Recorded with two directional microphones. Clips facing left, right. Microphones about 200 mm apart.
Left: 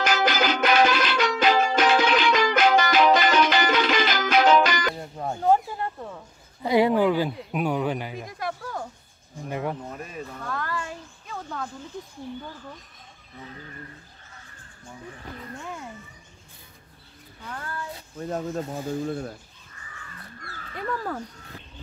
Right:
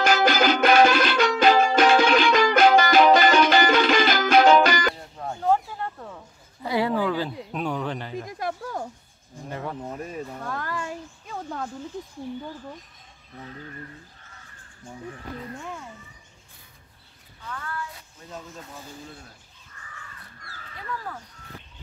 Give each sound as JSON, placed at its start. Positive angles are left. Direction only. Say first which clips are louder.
{"t": 0.1, "sound": "music", "louder": "right 5 dB", "side_deg": -50}
{"t": 5.1, "sound": "a sound", "louder": "left 3 dB", "side_deg": 20}
{"t": 5.9, "sound": "a sound", "louder": "left 3 dB", "side_deg": 5}
{"t": 6.6, "sound": "speech", "louder": "left 4 dB", "side_deg": 15}
{"t": 9.5, "sound": "speech", "louder": "left 4 dB", "side_deg": 15}
{"t": 10.3, "sound": "speech", "louder": "even", "side_deg": -20}
{"t": 17.5, "sound": "a sound", "louder": "even", "side_deg": 30}
{"t": 18.2, "sound": "speech", "louder": "left 12 dB", "side_deg": 55}
{"t": 18.6, "sound": "speech", "louder": "left 12 dB", "side_deg": 45}
{"t": 19.0, "sound": "speech", "louder": "left 15 dB", "side_deg": 65}